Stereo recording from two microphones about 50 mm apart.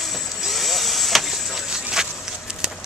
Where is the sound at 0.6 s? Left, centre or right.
Centre.